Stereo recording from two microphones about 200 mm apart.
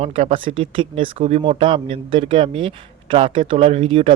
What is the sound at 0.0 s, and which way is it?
A man's voice, 30° right (ahead or behind).